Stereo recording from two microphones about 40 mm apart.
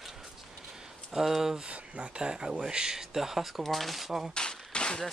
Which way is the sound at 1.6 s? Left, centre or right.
Right.